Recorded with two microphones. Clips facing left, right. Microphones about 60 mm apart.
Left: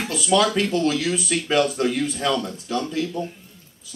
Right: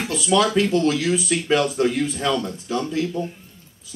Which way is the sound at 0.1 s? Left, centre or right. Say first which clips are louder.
Right 1 dB; centre.